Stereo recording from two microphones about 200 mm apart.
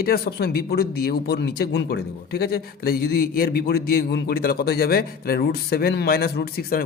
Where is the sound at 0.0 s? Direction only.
50° left (ahead or behind).